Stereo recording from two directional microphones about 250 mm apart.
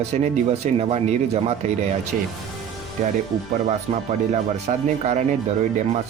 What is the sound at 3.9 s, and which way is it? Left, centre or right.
Speech, right.